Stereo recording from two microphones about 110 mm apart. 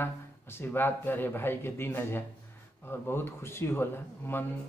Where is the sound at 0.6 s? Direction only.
20° left (ahead or behind).